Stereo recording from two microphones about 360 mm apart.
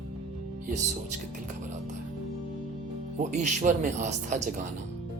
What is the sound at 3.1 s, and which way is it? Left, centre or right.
Speech, centre.